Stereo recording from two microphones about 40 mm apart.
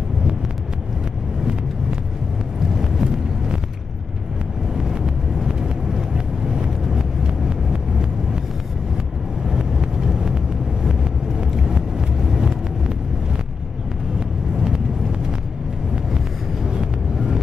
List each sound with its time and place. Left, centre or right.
2.7 s vehicle: centre
4.7 s vehicle: centre
9.5 s vehicle: centre
11.5 s vehicle: centre
16.7 s vehicle: centre